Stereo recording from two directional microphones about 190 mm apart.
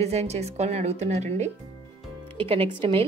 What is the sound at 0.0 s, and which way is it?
A woman's voice, 35° right (ahead or behind).